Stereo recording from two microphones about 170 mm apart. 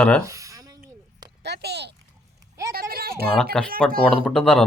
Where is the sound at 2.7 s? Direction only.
60° right (ahead or behind).